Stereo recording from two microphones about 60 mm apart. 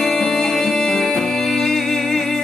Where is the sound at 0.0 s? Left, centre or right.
Centre.